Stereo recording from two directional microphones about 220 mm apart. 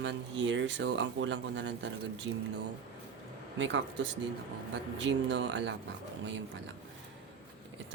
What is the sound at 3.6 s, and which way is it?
Speech, 55° right (ahead or behind).